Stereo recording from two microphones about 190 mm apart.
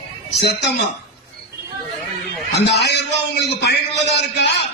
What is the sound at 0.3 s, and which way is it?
Speech, 60° left (ahead or behind).